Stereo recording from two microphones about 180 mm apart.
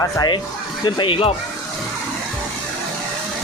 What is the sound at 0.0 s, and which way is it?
Speech, 20° left (ahead or behind).